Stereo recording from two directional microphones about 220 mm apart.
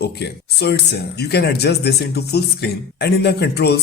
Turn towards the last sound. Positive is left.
turn(degrees=50)  # may be behind; listen again after turning